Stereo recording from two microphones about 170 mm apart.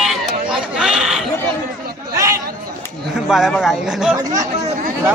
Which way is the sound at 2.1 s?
20° right (ahead or behind).